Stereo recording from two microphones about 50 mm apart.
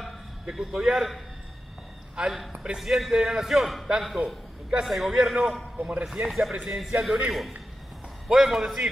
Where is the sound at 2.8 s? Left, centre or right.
Centre.